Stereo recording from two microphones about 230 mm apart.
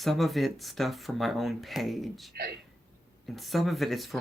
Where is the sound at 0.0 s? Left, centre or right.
Centre.